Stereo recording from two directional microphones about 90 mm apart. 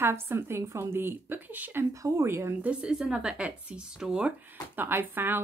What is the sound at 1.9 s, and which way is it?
Speech, 35° right (ahead or behind).